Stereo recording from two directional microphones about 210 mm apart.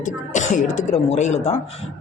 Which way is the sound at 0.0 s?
35° left (ahead or behind).